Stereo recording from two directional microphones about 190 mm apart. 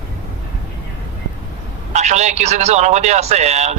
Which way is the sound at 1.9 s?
35° right (ahead or behind).